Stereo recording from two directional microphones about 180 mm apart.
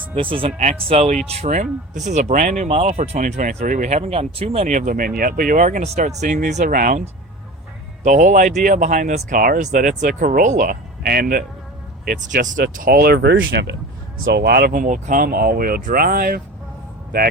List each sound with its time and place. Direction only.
0.1 s speech: 30° right (ahead or behind); by 7.0 s 50° right (ahead or behind)
8.0 s speech: 45° right (ahead or behind); by 14.7 s 65° right (ahead or behind)
14.7 s speech: 45° right (ahead or behind)